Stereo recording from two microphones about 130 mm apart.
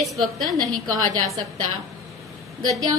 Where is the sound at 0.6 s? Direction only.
30° right (ahead or behind).